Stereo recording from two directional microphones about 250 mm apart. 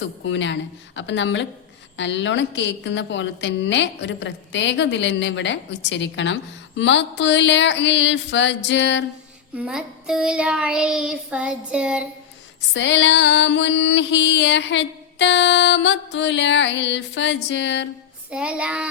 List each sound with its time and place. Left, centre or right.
0.3 s mantra: left
9.6 s child singing: centre
12.7 s mantra: left
18.3 s child singing: centre